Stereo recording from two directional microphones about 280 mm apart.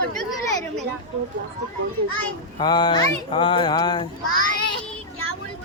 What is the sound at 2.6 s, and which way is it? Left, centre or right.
Speech, centre.